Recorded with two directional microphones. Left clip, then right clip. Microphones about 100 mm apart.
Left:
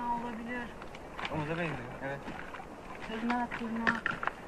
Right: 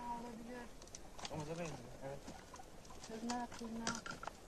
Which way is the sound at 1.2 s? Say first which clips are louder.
Left 11 dB; 50° right (ahead or behind).